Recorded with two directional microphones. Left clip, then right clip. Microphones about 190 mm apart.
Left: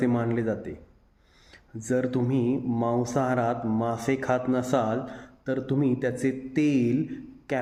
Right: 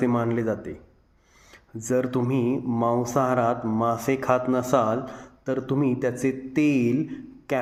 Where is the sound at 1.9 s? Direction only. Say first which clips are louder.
Right 2 dB; 5° left (ahead or behind).